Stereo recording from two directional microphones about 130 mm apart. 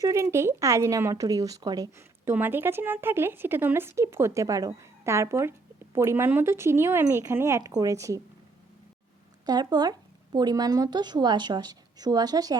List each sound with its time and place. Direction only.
0.0 s speech: 20° right (ahead or behind)
9.5 s a woman's voice: 30° right (ahead or behind)